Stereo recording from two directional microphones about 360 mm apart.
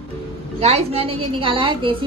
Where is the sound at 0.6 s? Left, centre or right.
Centre.